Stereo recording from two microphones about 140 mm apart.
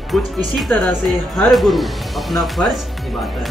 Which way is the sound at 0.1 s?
Centre (ahead or behind).